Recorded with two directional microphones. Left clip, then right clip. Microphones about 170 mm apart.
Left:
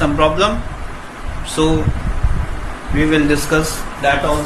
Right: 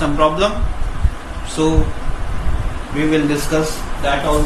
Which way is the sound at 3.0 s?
40° left (ahead or behind).